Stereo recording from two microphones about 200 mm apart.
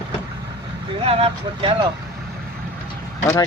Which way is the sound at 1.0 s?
30° right (ahead or behind).